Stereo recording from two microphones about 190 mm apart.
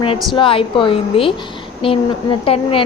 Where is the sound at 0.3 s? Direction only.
25° left (ahead or behind).